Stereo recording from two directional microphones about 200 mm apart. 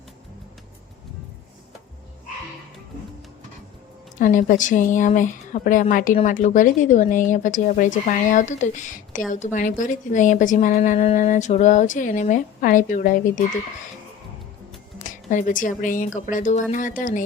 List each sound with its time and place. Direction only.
4.2 s a woman's voice: 40° left (ahead or behind)
14.9 s a woman's voice: 40° left (ahead or behind)